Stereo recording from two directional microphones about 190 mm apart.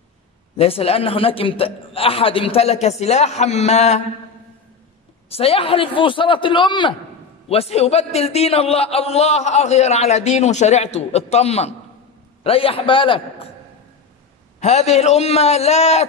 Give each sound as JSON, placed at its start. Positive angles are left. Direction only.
{"t": 0.6, "sound": "a man's voice", "side_deg": 30}
{"t": 5.3, "sound": "a man's voice", "side_deg": 30}
{"t": 14.6, "sound": "a man's voice", "side_deg": 35}